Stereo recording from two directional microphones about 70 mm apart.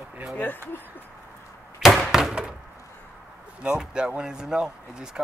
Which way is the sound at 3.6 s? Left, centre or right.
Centre.